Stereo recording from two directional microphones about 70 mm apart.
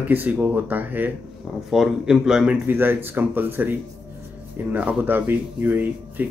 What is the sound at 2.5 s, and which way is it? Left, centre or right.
Speech, right.